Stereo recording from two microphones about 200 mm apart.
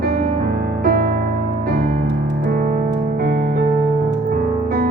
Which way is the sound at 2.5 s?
50° right (ahead or behind).